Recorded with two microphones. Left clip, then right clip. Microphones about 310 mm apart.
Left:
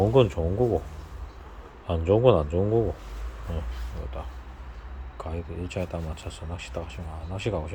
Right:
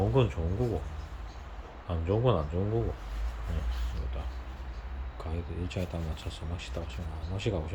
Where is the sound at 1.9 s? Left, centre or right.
Left.